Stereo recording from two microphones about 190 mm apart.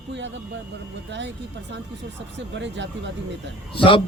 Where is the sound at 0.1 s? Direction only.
70° right (ahead or behind).